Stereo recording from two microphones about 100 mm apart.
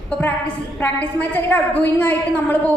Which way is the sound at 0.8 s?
20° left (ahead or behind).